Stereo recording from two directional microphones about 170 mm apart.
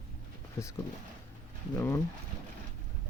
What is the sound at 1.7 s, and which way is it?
Speech, 15° left (ahead or behind).